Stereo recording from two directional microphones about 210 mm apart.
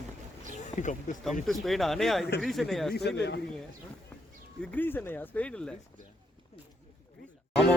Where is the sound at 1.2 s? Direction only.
Centre (ahead or behind).